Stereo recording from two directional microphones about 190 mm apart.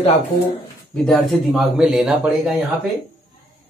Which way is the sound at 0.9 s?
Centre (ahead or behind).